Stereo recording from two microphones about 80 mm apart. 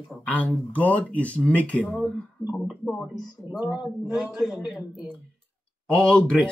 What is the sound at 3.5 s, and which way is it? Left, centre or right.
Speech, right.